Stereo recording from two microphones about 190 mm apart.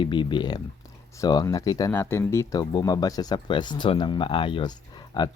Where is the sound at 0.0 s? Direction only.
25° left (ahead or behind).